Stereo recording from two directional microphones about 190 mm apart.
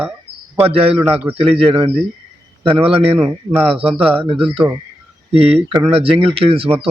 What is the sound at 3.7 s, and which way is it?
A man's voice, 30° right (ahead or behind).